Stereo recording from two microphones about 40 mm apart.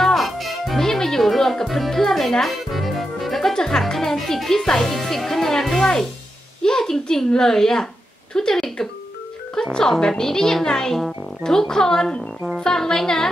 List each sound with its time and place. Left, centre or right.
0.0 s music: centre
0.7 s music: centre
3.5 s speech: centre